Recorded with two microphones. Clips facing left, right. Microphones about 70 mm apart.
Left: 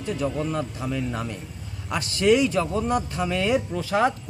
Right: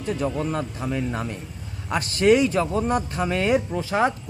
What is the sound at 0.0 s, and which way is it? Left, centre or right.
Speech, right.